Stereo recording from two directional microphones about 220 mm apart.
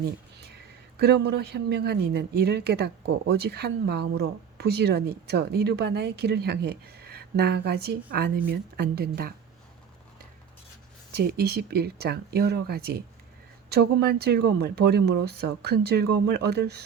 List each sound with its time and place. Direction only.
0.0 s a sound: 45° right (ahead or behind)
0.9 s speech: 50° right (ahead or behind)
11.1 s speech: 45° right (ahead or behind)